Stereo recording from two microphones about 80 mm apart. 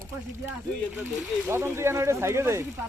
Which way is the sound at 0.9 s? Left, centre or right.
Right.